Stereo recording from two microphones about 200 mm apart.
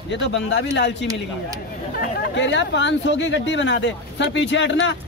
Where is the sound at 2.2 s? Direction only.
65° left (ahead or behind).